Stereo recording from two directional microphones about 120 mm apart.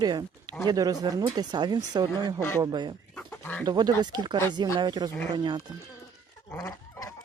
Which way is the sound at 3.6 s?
35° right (ahead or behind).